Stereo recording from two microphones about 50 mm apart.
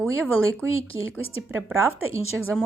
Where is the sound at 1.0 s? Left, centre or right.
Right.